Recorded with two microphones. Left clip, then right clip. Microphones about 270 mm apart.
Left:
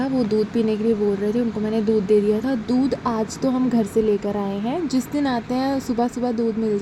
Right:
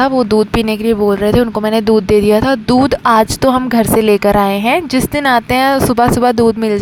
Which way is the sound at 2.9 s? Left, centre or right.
Right.